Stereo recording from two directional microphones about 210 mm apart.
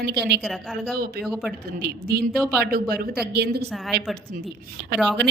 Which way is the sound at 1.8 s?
50° right (ahead or behind).